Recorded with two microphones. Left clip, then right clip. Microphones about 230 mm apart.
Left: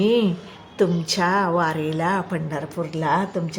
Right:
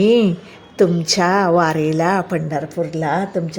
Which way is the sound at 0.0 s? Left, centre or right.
Right.